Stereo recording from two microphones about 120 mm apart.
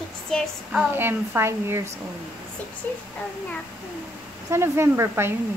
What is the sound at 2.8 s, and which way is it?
Child singing, 15° left (ahead or behind).